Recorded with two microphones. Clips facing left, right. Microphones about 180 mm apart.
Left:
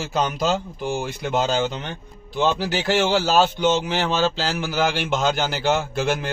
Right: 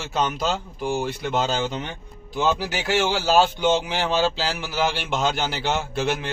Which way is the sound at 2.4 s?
10° right (ahead or behind).